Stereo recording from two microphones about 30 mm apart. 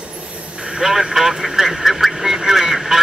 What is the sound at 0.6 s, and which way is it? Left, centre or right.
Vehicle, right.